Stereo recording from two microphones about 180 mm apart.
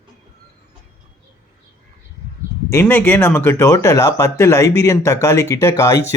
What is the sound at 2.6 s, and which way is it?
Speech, 10° left (ahead or behind).